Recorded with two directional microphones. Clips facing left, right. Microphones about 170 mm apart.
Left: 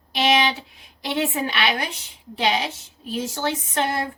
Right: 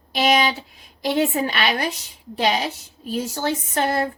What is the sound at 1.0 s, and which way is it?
A woman's voice, 40° right (ahead or behind).